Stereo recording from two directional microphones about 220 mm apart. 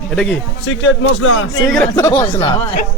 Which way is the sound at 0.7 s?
55° left (ahead or behind).